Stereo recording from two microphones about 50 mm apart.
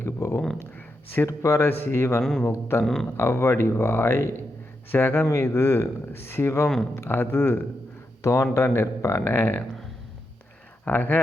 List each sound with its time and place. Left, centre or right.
0.0 s a sound: left
1.3 s speech: left
2.8 s speech: centre
3.2 s speech: left
6.9 s speech: left
8.2 s speech: left
8.5 s speech: left
9.0 s speech: left
9.2 s speech: left
10.8 s speech: left